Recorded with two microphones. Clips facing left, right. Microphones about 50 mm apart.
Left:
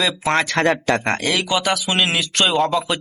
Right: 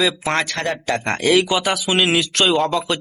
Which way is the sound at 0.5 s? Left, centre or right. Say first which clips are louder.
Left 4 dB; left.